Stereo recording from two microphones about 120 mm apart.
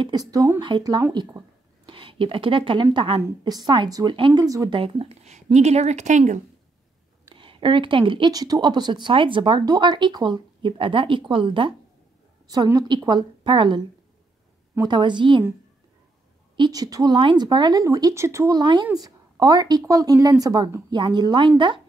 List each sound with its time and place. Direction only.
0.0 s a woman's voice: 35° right (ahead or behind)
1.9 s a woman's voice: 45° right (ahead or behind)
3.2 s a woman's voice: 35° right (ahead or behind)
4.7 s speech: 50° right (ahead or behind); by 6.4 s 90° right
7.3 s speech: 45° right (ahead or behind)
12.4 s a woman's voice: 30° right (ahead or behind)
16.5 s a woman's voice: 35° right (ahead or behind)
18.6 s a woman's voice: 40° right (ahead or behind)